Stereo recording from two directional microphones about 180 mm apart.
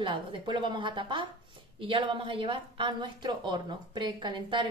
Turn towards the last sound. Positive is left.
turn(degrees=-25)  # may be behind; listen again after turning